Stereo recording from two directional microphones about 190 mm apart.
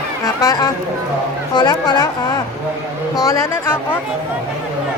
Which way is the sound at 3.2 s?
15° left (ahead or behind).